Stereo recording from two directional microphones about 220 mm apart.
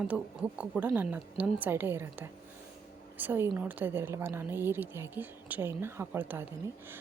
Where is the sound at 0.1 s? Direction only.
Centre (ahead or behind).